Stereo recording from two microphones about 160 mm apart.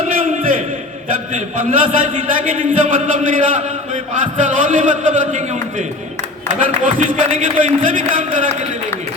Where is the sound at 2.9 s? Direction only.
55° right (ahead or behind).